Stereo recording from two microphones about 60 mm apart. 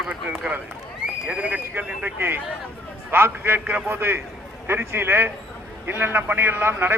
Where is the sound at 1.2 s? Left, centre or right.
Right.